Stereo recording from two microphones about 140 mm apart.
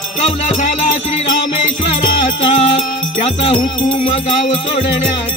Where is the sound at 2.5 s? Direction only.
55° left (ahead or behind).